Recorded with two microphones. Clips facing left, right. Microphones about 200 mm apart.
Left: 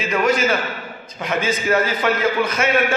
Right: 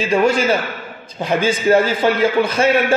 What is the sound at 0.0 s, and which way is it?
A man's voice, 30° right (ahead or behind).